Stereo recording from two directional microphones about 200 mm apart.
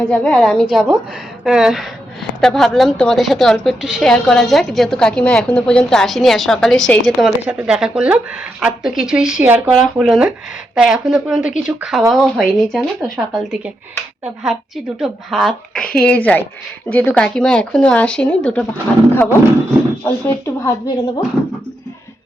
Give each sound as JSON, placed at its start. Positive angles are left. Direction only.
{"t": 0.1, "sound": "a woman's voice", "side_deg": 5}
{"t": 14.9, "sound": "a woman's voice", "side_deg": 0}
{"t": 20.1, "sound": "speech", "side_deg": 15}